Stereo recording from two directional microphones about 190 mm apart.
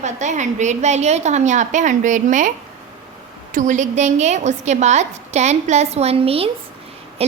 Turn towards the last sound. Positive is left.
turn(degrees=-30)  # may be behind; listen again after turning